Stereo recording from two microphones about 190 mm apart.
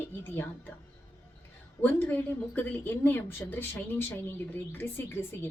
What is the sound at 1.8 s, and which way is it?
A woman's voice, 10° left (ahead or behind).